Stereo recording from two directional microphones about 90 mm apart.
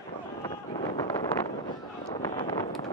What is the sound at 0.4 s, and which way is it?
Wind noise, 55° left (ahead or behind).